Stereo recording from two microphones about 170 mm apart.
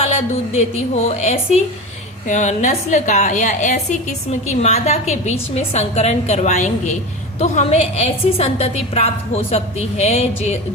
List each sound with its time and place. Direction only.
1.0 s a woman's voice: 40° left (ahead or behind)